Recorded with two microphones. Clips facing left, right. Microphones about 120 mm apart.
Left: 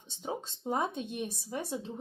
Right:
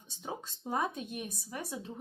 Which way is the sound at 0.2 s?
25° left (ahead or behind).